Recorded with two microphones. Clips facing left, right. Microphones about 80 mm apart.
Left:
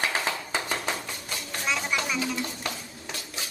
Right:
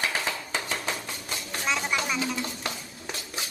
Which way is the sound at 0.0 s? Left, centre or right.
Centre.